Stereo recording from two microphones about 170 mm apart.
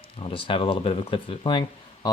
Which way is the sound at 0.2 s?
30° left (ahead or behind).